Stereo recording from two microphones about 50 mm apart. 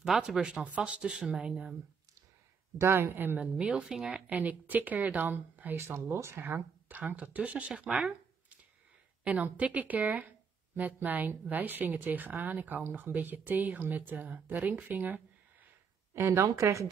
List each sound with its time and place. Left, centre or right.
0.0 s speech: centre
0.4 s a woman's voice: right
2.8 s speech: right
3.5 s speech: right
4.3 s speech: right
5.8 s speech: right
6.4 s speech: right
7.2 s a woman's voice: right
16.1 s speech: right